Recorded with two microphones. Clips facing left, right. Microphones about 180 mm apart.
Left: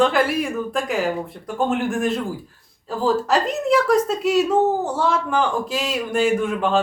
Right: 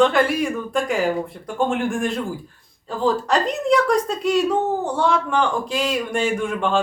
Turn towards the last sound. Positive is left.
turn(degrees=0)  # may be behind; listen again after turning